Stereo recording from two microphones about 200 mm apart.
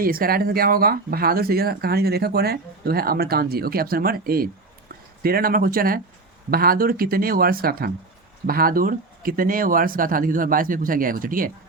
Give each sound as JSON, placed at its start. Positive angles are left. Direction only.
{"t": 0.0, "sound": "speech", "side_deg": -45}